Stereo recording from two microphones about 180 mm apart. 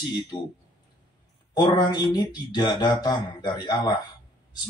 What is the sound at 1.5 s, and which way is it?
A man's voice, 25° left (ahead or behind).